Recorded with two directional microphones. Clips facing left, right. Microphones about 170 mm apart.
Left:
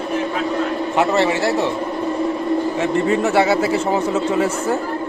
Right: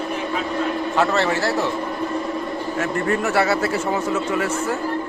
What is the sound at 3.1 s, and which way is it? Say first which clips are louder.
Speech: left 3 dB; 20° left (ahead or behind).